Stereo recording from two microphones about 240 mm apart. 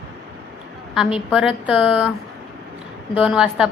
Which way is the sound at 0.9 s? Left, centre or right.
Centre.